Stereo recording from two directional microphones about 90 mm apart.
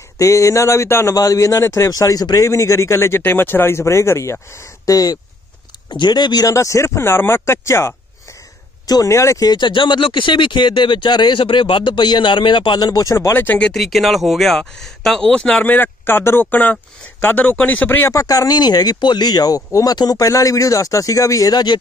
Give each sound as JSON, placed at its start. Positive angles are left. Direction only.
{"t": 0.2, "sound": "a man's voice", "side_deg": 35}
{"t": 1.1, "sound": "a man's voice", "side_deg": 40}
{"t": 5.9, "sound": "speech", "side_deg": 55}
{"t": 6.5, "sound": "speech", "side_deg": 35}
{"t": 8.8, "sound": "speech", "side_deg": 45}
{"t": 9.1, "sound": "a man's voice", "side_deg": 35}
{"t": 9.5, "sound": "speech", "side_deg": 60}
{"t": 11.3, "sound": "speech", "side_deg": 80}
{"t": 13.6, "sound": "speech", "side_deg": 5}
{"t": 15.6, "sound": "speech", "side_deg": 20}
{"t": 18.1, "sound": "speech", "side_deg": 40}